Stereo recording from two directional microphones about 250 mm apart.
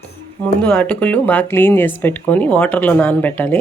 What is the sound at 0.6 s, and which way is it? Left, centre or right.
Speech, centre.